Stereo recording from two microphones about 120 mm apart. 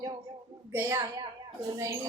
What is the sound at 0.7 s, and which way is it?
A woman's voice, 25° right (ahead or behind).